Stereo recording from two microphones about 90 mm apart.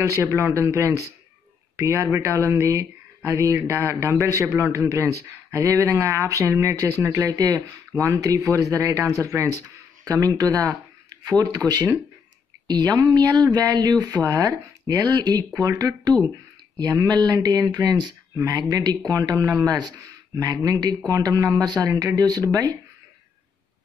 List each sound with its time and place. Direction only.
0.0 s a man's voice: 35° right (ahead or behind)
7.2 s a man's voice: 45° right (ahead or behind)
18.3 s speech: 35° right (ahead or behind)
18.6 s a man's voice: 50° right (ahead or behind)